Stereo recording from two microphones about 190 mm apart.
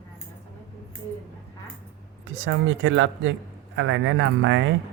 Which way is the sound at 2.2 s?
90° right.